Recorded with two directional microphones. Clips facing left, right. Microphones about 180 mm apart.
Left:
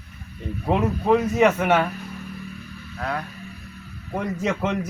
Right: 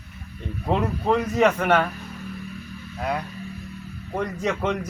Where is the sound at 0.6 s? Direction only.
5° left (ahead or behind).